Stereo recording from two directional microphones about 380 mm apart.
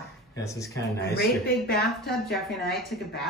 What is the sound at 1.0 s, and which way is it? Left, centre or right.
Speech, left.